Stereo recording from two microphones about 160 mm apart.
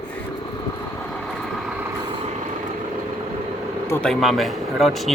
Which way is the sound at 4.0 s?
Centre (ahead or behind).